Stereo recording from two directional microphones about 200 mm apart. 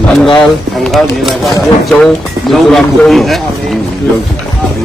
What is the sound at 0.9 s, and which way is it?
Speech, centre (ahead or behind).